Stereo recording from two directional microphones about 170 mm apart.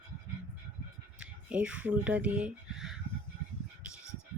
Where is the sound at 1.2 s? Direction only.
5° right (ahead or behind).